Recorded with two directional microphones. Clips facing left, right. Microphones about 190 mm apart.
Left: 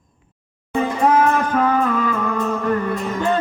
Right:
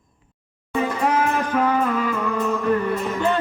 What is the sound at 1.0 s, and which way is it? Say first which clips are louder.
Music: left 7 dB; 45° left (ahead or behind).